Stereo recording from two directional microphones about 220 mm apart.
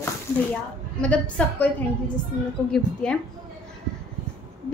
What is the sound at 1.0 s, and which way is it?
Female singing, 5° left (ahead or behind).